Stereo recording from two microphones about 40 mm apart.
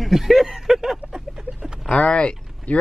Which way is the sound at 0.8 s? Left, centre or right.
Centre.